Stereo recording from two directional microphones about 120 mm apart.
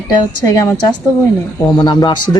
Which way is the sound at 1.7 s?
40° left (ahead or behind).